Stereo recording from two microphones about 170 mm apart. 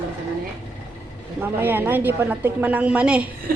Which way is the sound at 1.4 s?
10° right (ahead or behind).